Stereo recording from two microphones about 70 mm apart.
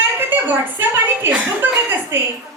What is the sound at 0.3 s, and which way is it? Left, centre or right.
A woman's voice, right.